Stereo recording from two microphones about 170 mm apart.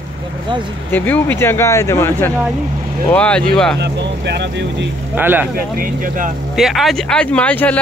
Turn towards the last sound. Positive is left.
turn(degrees=10)  # may be behind; listen again after turning